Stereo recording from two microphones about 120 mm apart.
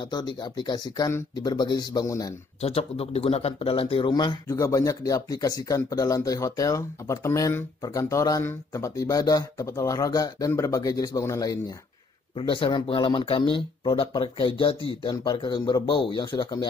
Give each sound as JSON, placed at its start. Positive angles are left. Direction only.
{"t": 0.0, "sound": "speech", "side_deg": 35}
{"t": 2.6, "sound": "speech", "side_deg": 60}
{"t": 4.5, "sound": "speech", "side_deg": 25}
{"t": 12.4, "sound": "speech", "side_deg": 45}